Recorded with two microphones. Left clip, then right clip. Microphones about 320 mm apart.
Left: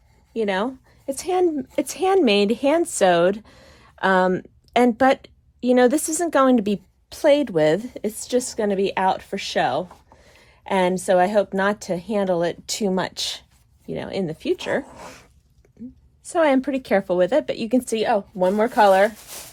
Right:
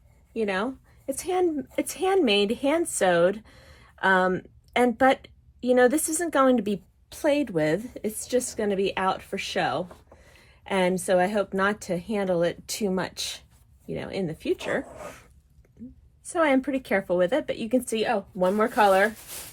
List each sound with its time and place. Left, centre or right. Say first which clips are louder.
0.3 s speech: left 4 dB; left
16.2 s speech: left 4 dB; left